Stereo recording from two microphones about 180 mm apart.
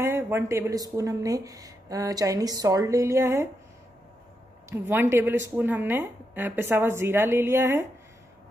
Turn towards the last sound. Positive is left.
turn(degrees=-15)  # may be behind; listen again after turning